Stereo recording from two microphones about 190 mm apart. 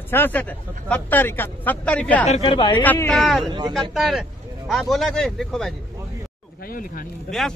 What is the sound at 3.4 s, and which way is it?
Speech, 25° right (ahead or behind).